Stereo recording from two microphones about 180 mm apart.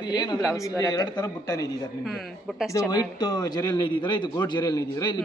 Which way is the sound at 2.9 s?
20° left (ahead or behind).